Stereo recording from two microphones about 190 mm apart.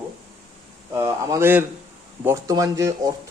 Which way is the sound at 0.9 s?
15° right (ahead or behind).